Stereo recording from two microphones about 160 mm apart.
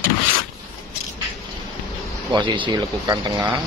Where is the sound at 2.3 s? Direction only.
30° right (ahead or behind).